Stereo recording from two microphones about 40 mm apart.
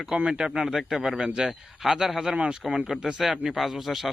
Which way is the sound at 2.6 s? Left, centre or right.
Centre.